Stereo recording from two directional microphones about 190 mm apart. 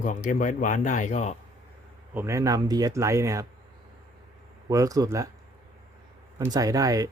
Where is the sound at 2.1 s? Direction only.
15° right (ahead or behind).